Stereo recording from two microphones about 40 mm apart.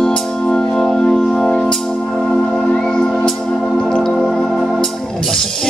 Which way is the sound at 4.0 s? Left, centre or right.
Centre.